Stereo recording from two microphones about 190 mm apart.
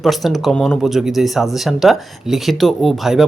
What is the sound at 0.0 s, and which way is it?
Speech, centre (ahead or behind).